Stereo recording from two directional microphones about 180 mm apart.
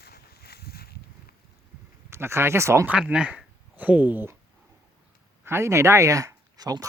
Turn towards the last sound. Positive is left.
turn(degrees=-20)  # may be behind; listen again after turning